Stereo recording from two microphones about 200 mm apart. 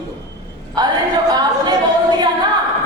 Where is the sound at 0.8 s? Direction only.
20° right (ahead or behind).